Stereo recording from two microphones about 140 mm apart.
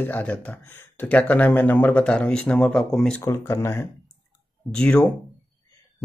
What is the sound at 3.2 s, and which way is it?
Speech, 20° left (ahead or behind).